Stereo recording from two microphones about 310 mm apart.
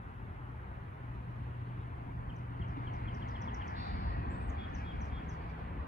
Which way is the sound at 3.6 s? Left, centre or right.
Left.